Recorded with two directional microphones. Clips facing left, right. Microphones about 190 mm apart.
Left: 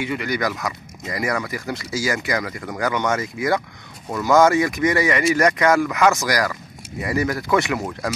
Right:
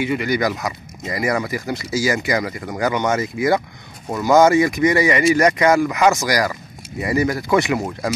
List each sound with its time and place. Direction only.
0.0 s speech: 10° right (ahead or behind)
0.4 s speech: 20° right (ahead or behind)
1.5 s speech: 5° right (ahead or behind)
2.0 s speech: 20° right (ahead or behind)
4.3 s speech: 20° right (ahead or behind)